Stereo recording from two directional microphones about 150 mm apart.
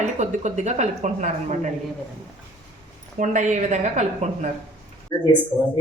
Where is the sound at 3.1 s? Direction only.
55° right (ahead or behind).